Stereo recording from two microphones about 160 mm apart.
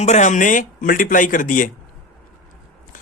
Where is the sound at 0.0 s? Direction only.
45° left (ahead or behind).